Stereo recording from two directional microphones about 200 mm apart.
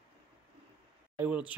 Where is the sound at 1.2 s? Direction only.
5° right (ahead or behind).